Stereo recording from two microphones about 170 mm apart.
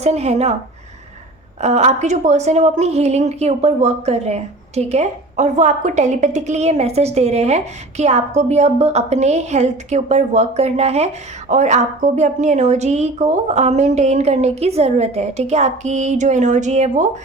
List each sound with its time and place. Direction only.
0.0 s a woman's voice: 40° right (ahead or behind)
1.6 s a woman's voice: 40° right (ahead or behind)